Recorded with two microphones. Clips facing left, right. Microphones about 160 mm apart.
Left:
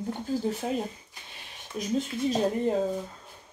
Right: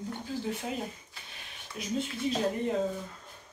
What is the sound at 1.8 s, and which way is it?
Speech, 45° left (ahead or behind).